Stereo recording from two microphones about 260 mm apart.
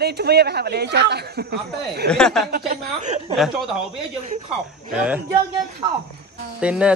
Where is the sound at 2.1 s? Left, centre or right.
Centre.